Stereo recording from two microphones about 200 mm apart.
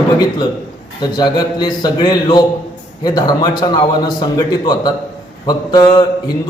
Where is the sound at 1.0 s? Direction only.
20° left (ahead or behind).